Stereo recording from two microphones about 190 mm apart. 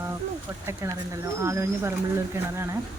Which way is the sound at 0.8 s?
10° right (ahead or behind).